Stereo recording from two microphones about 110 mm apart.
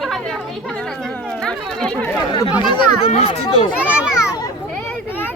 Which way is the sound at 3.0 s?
70° left (ahead or behind).